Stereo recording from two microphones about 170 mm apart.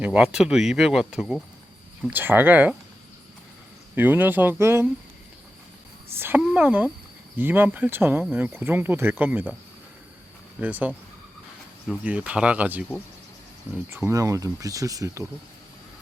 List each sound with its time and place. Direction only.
0.0 s speech: 5° right (ahead or behind)
3.9 s speech: 10° right (ahead or behind)
6.1 s speech: 10° right (ahead or behind)
10.6 s speech: 10° right (ahead or behind)
12.0 s speech: 5° right (ahead or behind)
13.9 s speech: 15° right (ahead or behind)